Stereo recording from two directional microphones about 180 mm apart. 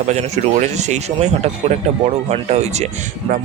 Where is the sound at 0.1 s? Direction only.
40° right (ahead or behind).